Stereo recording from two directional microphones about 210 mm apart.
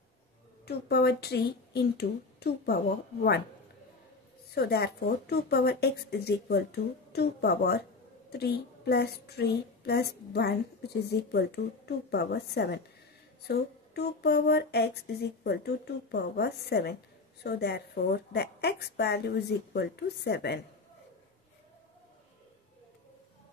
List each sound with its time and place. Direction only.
0.7 s a woman's voice: 50° left (ahead or behind)
4.6 s a woman's voice: 50° left (ahead or behind)